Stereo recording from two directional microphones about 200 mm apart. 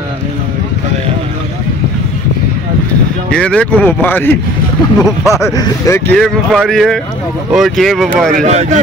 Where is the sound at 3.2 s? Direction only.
5° left (ahead or behind).